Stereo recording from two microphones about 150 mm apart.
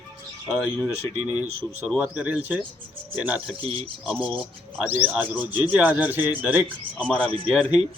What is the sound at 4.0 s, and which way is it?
A man's voice, 5° right (ahead or behind).